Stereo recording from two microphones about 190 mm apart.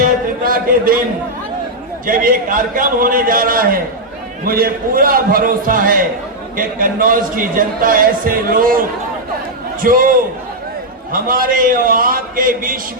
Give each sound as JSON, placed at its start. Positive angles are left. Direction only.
{"t": 0.4, "sound": "a man's voice", "side_deg": -50}
{"t": 2.0, "sound": "a man's voice", "side_deg": -45}
{"t": 9.8, "sound": "a man's voice", "side_deg": -45}
{"t": 11.1, "sound": "a man's voice", "side_deg": -50}